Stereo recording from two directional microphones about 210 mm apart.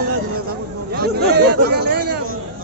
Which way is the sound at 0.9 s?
50° right (ahead or behind).